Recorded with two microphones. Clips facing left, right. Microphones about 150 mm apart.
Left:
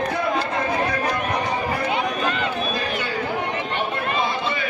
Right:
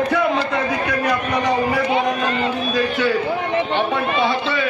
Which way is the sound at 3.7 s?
90° right.